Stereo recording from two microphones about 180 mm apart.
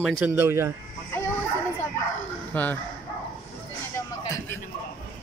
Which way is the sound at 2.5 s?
10° left (ahead or behind).